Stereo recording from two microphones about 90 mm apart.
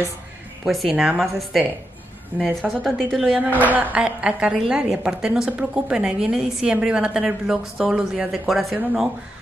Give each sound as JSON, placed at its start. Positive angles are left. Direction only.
{"t": 0.7, "sound": "a woman's voice", "side_deg": -5}
{"t": 2.8, "sound": "a woman's voice", "side_deg": 0}
{"t": 3.3, "sound": "a woman's voice", "side_deg": -20}